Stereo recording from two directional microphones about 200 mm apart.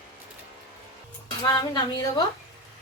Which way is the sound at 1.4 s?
20° left (ahead or behind).